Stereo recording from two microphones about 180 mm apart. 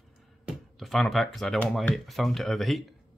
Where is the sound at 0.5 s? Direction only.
Centre (ahead or behind).